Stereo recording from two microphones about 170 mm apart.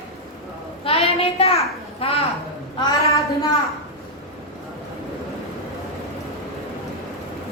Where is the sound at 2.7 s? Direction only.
20° left (ahead or behind).